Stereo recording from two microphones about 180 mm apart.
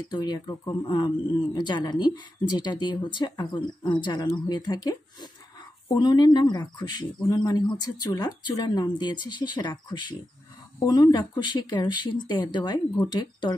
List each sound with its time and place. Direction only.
0.1 s speech: 20° left (ahead or behind)